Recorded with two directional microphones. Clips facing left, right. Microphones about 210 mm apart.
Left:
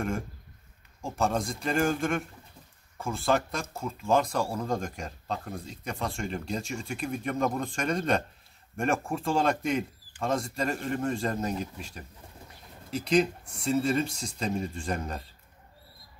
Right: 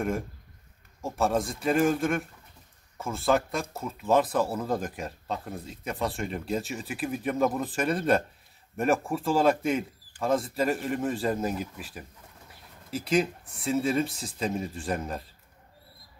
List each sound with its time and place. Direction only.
1.0 s speech: 5° right (ahead or behind)